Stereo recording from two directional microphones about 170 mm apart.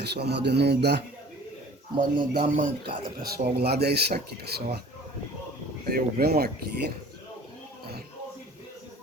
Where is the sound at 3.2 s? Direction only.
70° right (ahead or behind).